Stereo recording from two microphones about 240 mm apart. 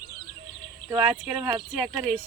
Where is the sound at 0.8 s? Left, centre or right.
Centre.